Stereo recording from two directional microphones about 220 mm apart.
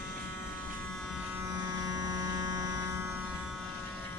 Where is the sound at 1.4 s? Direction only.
15° right (ahead or behind).